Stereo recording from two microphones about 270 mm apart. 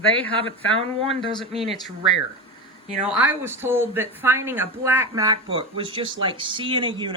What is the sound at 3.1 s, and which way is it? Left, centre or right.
Speech, centre.